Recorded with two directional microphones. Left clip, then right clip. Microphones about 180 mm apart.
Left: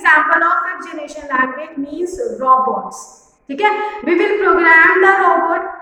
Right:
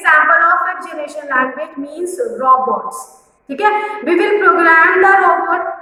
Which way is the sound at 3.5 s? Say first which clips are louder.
Right 1 dB; 10° left (ahead or behind).